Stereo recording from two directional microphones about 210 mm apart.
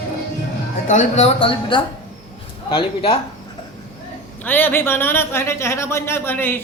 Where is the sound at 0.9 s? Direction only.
35° left (ahead or behind).